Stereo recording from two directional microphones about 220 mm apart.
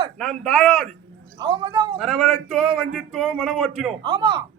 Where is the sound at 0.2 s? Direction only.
Centre (ahead or behind).